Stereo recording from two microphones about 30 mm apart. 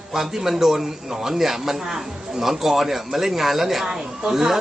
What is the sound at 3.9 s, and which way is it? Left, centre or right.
Speech, centre.